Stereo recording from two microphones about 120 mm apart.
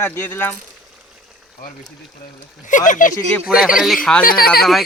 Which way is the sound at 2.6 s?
90° left.